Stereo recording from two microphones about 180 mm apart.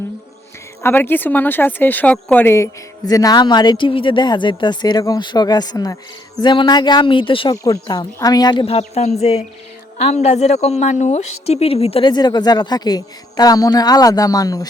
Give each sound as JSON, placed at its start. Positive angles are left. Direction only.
{"t": 0.8, "sound": "a woman's voice", "side_deg": 10}